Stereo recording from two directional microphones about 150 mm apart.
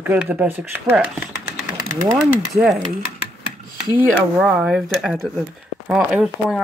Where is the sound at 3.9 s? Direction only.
5° right (ahead or behind).